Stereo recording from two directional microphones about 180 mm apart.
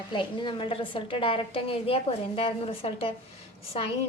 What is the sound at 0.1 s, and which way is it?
A woman's voice, 25° left (ahead or behind).